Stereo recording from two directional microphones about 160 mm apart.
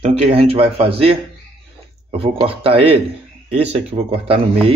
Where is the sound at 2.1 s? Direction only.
35° right (ahead or behind).